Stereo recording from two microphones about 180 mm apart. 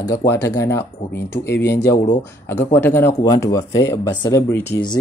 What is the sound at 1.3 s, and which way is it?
Speech, 65° left (ahead or behind).